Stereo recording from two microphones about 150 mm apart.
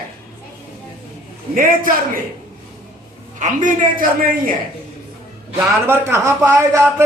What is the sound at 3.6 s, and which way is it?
Speech, 65° right (ahead or behind).